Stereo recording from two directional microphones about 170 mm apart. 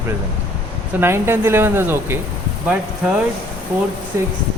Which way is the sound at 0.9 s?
15° right (ahead or behind).